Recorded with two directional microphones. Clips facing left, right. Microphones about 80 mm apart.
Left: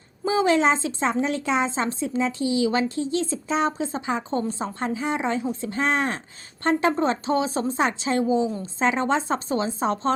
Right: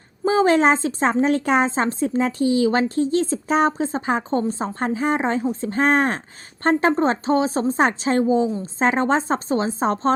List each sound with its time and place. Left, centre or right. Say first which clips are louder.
0.3 s speech: right 4 dB; right